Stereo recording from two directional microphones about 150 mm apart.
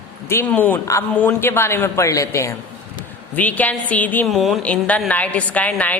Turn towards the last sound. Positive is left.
turn(degrees=10)  # may be behind; listen again after turning